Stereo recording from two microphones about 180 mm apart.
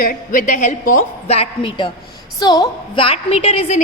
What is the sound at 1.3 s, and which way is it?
Speech, 35° left (ahead or behind).